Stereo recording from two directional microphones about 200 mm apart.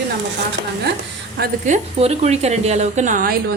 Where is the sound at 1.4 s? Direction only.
35° right (ahead or behind).